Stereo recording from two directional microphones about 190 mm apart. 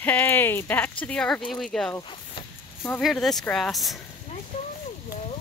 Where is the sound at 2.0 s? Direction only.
25° left (ahead or behind).